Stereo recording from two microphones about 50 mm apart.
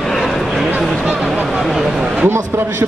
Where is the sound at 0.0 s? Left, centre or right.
Centre.